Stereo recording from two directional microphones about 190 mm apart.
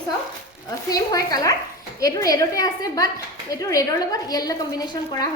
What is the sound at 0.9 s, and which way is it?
A woman's voice, 20° left (ahead or behind).